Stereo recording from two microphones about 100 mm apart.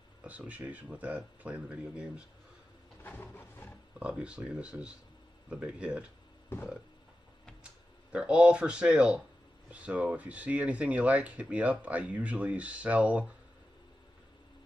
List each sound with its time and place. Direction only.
0.2 s speech: 15° right (ahead or behind)
3.0 s a sound: 20° left (ahead or behind)
4.0 s speech: 10° right (ahead or behind)
8.1 s speech: 10° right (ahead or behind)